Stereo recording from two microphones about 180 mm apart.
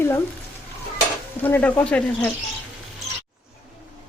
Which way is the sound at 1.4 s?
10° left (ahead or behind).